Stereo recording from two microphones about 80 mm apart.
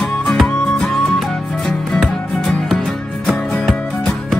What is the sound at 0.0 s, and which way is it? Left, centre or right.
Music, centre.